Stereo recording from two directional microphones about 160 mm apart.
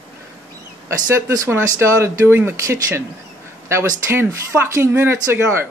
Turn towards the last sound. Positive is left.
turn(degrees=-15)  # may be behind; listen again after turning